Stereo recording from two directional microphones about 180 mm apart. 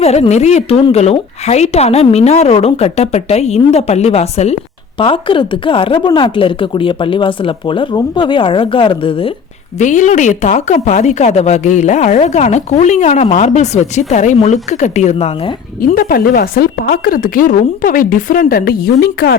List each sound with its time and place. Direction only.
0.0 s a woman's voice: 35° left (ahead or behind)
9.7 s speech: 45° left (ahead or behind)
15.9 s speech: 50° left (ahead or behind)